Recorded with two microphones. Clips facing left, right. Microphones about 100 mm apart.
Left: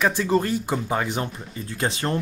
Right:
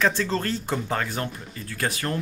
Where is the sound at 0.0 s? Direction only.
15° left (ahead or behind).